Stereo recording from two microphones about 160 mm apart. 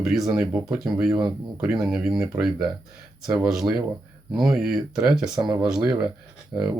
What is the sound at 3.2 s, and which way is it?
Speech, 5° right (ahead or behind).